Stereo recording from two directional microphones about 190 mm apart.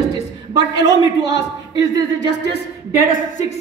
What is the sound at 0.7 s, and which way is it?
Speech, 70° left (ahead or behind).